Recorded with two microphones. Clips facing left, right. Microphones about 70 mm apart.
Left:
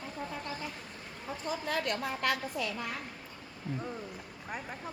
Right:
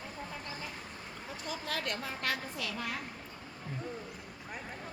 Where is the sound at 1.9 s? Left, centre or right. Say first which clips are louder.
Left 4 dB; left.